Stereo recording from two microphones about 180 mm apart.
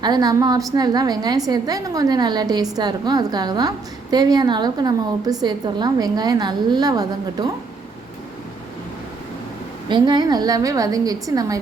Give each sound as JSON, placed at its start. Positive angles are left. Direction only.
{"t": 0.0, "sound": "a woman's voice", "side_deg": -20}
{"t": 9.9, "sound": "a woman's voice", "side_deg": -25}